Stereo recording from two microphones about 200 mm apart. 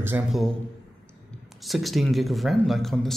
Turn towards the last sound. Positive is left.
turn(degrees=0)  # may be behind; listen again after turning